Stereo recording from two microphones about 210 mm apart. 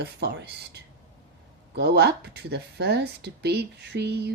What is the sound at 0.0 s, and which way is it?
Speech, 50° right (ahead or behind).